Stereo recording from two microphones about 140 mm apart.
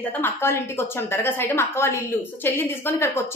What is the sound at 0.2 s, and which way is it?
A woman's voice, 15° left (ahead or behind).